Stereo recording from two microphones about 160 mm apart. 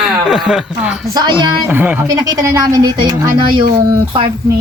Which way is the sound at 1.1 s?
25° right (ahead or behind).